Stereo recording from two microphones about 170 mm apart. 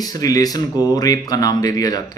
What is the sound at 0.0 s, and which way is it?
A man's voice, 20° left (ahead or behind).